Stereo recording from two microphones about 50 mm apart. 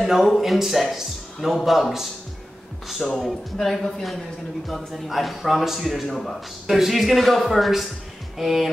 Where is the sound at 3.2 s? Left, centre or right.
Centre.